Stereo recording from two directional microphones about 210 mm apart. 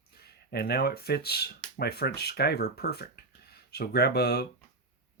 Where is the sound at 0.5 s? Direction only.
50° left (ahead or behind).